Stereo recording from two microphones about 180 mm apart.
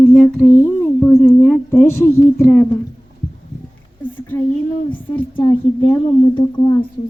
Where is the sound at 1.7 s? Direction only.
15° left (ahead or behind).